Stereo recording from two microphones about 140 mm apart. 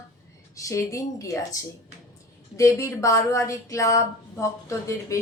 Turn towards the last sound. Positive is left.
turn(degrees=20)  # may be behind; listen again after turning